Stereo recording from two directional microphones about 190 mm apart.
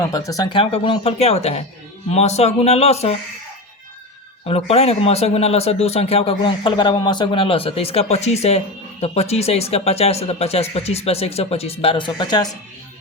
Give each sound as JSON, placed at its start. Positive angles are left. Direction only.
{"t": 0.0, "sound": "a man's voice", "side_deg": 20}
{"t": 4.4, "sound": "a man's voice", "side_deg": 30}